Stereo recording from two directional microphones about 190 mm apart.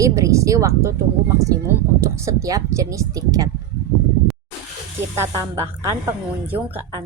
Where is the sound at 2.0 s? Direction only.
15° right (ahead or behind).